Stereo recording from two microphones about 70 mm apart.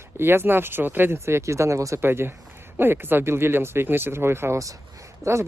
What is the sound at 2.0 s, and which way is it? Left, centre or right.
Speech, right.